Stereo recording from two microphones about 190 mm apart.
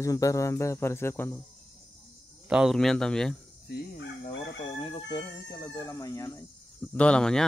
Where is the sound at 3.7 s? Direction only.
70° left (ahead or behind).